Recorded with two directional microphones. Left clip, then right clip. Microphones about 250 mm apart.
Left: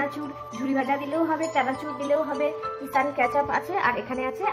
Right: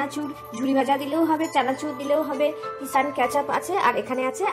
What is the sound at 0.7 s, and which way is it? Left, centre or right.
A woman's voice, centre.